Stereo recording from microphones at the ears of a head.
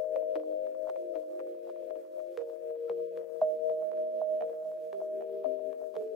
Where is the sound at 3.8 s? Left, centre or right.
Right.